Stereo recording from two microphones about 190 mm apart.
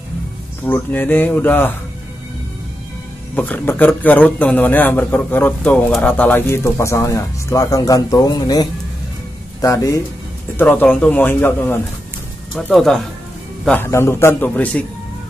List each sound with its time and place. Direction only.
0.7 s a man's voice: 10° left (ahead or behind)
3.3 s a man's voice: 10° left (ahead or behind)